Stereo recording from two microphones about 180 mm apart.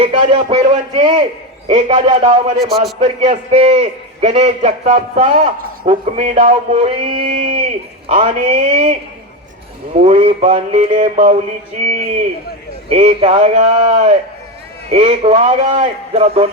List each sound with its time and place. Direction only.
0.0 s a man's voice: 30° right (ahead or behind)
2.6 s a man's voice: centre (ahead or behind)
3.0 s a man's voice: 35° right (ahead or behind)
12.9 s a man's voice: 35° right (ahead or behind)